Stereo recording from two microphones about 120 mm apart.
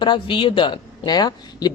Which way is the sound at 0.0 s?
45° left (ahead or behind).